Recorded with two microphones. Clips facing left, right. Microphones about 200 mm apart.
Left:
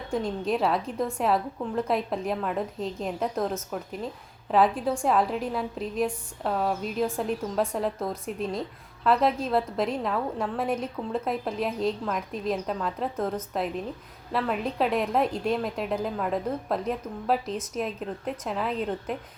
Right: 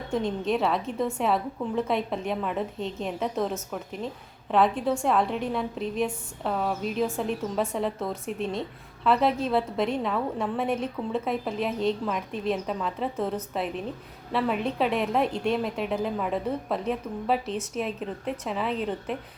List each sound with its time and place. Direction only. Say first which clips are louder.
0.1 s a woman's voice: right 1 dB; centre (ahead or behind)